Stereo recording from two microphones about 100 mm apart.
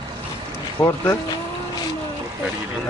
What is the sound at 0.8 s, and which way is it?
Speech, 20° left (ahead or behind).